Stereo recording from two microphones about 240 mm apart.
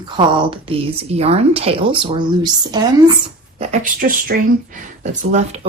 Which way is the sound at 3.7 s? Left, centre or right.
Right.